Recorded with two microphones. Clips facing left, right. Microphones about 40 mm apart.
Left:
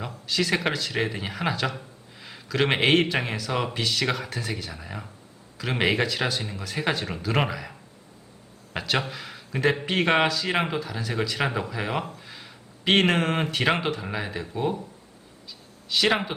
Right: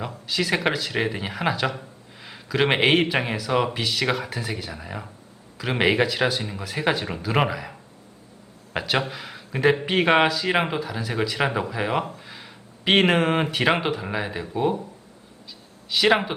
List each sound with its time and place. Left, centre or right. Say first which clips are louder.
0.3 s a man's voice: right 2 dB; centre
15.9 s speech: right 3 dB; centre